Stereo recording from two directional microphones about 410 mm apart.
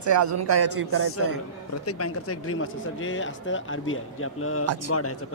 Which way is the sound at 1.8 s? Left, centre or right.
Left.